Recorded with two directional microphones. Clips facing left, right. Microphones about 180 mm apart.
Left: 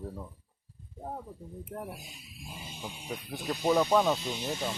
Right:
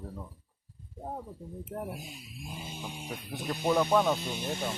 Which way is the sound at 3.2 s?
Centre (ahead or behind).